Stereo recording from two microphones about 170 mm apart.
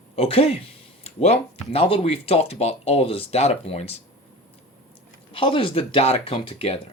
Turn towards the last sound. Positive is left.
turn(degrees=35)  # may be behind; listen again after turning